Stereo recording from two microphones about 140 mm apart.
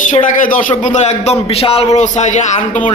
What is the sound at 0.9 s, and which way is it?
A man's voice, 55° left (ahead or behind).